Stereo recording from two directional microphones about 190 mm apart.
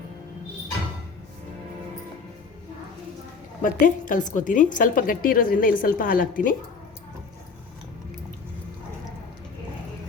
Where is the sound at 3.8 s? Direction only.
45° left (ahead or behind).